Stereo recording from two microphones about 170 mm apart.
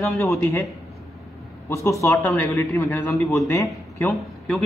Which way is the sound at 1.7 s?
15° left (ahead or behind).